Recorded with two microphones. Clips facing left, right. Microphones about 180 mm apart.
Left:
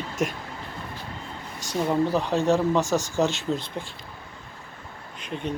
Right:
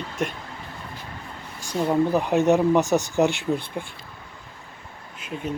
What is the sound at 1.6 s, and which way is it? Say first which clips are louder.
Speech: right 2 dB; 10° right (ahead or behind).